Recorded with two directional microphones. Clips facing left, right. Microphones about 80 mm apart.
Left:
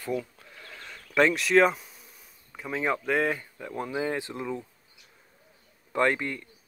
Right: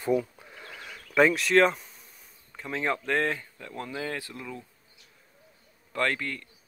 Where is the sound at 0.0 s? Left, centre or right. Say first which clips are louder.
Right 5 dB; centre.